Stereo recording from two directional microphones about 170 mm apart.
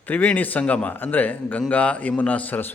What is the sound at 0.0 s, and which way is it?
A man's voice, 10° left (ahead or behind).